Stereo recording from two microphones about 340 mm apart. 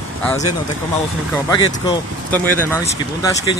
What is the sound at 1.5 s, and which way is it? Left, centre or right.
Speech, centre.